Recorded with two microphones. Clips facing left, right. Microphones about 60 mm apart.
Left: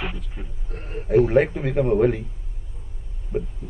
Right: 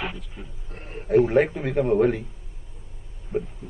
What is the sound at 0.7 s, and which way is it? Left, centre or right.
Speech, left.